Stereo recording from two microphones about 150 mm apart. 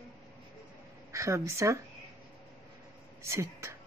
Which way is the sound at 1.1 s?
20° right (ahead or behind).